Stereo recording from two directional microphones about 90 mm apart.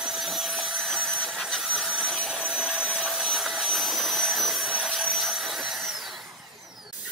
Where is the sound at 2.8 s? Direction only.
5° left (ahead or behind).